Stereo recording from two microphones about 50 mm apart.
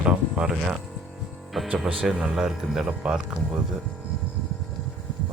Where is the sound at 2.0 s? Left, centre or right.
Centre.